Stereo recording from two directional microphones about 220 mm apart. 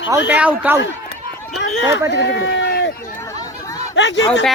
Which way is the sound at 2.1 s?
50° left (ahead or behind).